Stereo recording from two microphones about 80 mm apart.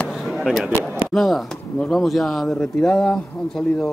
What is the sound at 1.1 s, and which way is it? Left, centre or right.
Speech, centre.